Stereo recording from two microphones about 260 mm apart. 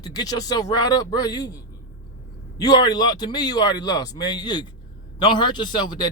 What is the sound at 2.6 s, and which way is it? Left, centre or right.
Speech, centre.